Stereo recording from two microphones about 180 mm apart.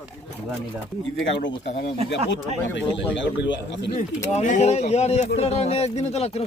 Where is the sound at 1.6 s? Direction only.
80° left.